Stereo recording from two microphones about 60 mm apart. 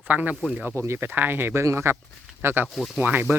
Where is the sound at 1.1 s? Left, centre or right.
Right.